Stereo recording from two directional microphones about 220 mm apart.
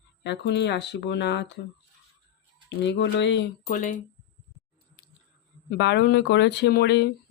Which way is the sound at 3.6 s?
35° left (ahead or behind).